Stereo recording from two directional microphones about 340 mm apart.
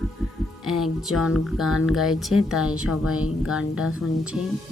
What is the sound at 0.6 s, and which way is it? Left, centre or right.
Speech, centre.